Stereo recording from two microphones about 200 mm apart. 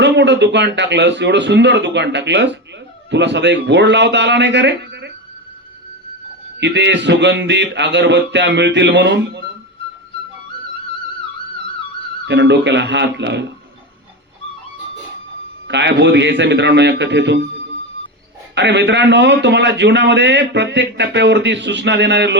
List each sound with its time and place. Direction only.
0.0 s a man's voice: 60° right (ahead or behind)
6.6 s a man's voice: 60° right (ahead or behind)
12.2 s a man's voice: 60° right (ahead or behind)
15.6 s a man's voice: 60° right (ahead or behind)
18.5 s a man's voice: 60° right (ahead or behind)